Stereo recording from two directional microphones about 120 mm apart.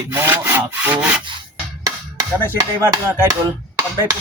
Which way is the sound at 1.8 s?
30° right (ahead or behind).